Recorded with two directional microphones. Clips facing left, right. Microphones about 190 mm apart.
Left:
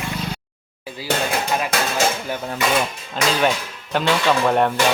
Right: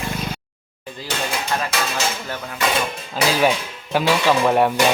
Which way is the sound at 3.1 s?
5° right (ahead or behind).